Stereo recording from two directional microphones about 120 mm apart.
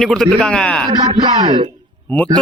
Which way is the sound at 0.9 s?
40° right (ahead or behind).